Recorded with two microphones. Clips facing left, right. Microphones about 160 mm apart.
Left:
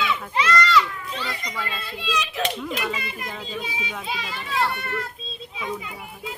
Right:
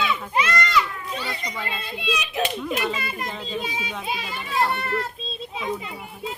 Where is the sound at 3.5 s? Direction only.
35° right (ahead or behind).